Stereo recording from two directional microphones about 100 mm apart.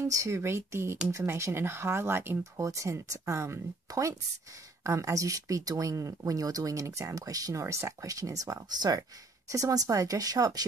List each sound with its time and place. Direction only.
0.0 s speech: 30° right (ahead or behind)